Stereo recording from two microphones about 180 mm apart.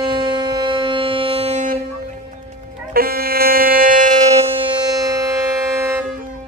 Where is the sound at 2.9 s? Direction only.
55° right (ahead or behind).